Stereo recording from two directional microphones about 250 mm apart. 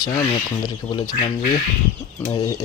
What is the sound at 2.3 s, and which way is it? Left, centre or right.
Speech, left.